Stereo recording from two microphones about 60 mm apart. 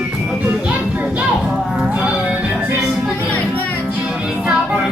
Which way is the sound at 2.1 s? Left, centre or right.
Right.